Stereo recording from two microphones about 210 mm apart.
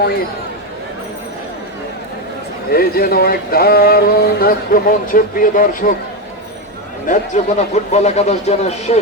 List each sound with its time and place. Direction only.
2.6 s speech: 45° left (ahead or behind)
7.1 s a man's voice: 35° left (ahead or behind)